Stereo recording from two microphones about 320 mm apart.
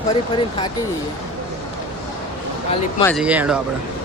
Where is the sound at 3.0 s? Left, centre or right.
Centre.